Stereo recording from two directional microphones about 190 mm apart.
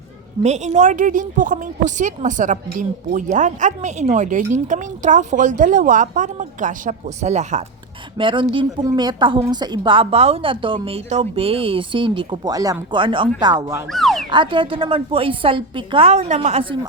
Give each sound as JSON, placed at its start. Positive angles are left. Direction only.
{"t": 0.4, "sound": "a woman's voice", "side_deg": -35}
{"t": 8.2, "sound": "a woman's voice", "side_deg": -25}
{"t": 13.9, "sound": "a sound", "side_deg": 0}
{"t": 14.3, "sound": "a woman's voice", "side_deg": -25}